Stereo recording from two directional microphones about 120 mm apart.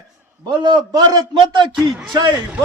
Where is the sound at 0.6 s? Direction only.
35° right (ahead or behind).